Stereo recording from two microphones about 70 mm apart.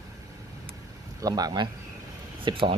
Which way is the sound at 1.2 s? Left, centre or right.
Right.